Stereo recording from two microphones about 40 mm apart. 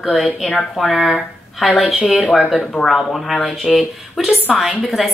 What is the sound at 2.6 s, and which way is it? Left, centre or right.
Speech, left.